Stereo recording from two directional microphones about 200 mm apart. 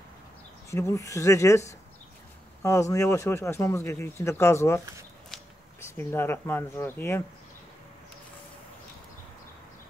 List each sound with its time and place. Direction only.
0.7 s speech: 15° left (ahead or behind)
5.9 s speech: 10° left (ahead or behind)